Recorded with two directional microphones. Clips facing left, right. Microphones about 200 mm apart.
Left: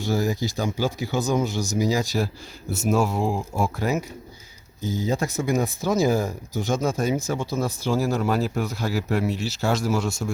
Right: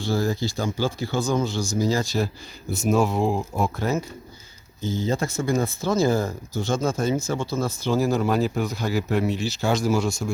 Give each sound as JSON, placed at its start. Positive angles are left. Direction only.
{"t": 0.1, "sound": "speech", "side_deg": 15}
{"t": 4.8, "sound": "speech", "side_deg": 40}
{"t": 5.1, "sound": "speech", "side_deg": 15}